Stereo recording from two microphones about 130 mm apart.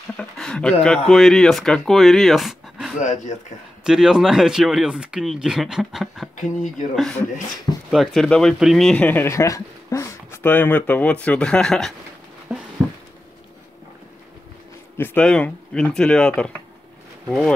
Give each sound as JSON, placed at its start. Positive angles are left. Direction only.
{"t": 0.2, "sound": "speech", "side_deg": 5}
{"t": 3.0, "sound": "speech", "side_deg": 70}
{"t": 3.8, "sound": "speech", "side_deg": -5}
{"t": 6.3, "sound": "speech", "side_deg": 80}
{"t": 7.9, "sound": "speech", "side_deg": 0}
{"t": 12.5, "sound": "a sound", "side_deg": -5}
{"t": 15.0, "sound": "speech", "side_deg": 10}